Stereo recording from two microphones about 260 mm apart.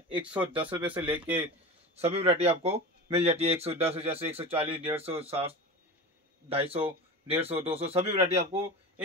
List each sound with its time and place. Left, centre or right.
0.1 s speech: centre
0.5 s speech: centre
0.7 s speech: centre
2.0 s speech: right
6.5 s speech: right